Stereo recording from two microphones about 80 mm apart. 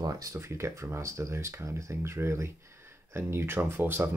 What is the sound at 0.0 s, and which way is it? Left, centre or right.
Speech, right.